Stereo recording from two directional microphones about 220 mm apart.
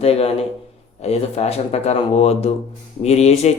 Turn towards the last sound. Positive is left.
turn(degrees=30)  # may be behind; listen again after turning